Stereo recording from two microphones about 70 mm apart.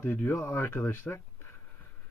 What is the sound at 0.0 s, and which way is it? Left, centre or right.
Speech, left.